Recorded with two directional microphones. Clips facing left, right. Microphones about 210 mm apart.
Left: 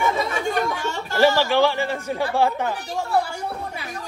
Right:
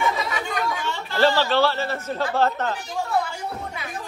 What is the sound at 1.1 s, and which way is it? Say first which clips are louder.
Speech: left 2 dB; 10° left (ahead or behind).